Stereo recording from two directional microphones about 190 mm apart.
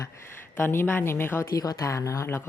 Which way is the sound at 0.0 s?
10° left (ahead or behind).